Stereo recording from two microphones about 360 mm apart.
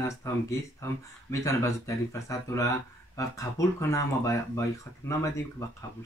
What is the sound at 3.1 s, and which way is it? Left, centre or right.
Speech, centre.